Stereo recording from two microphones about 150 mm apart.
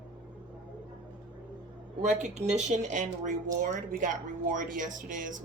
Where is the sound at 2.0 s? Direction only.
50° right (ahead or behind).